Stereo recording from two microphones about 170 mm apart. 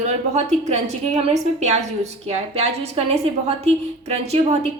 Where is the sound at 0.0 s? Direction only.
45° right (ahead or behind).